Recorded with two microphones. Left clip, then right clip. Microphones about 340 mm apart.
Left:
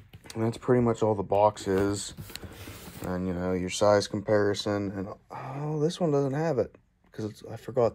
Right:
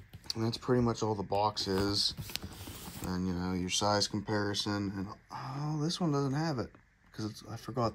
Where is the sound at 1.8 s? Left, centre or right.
Centre.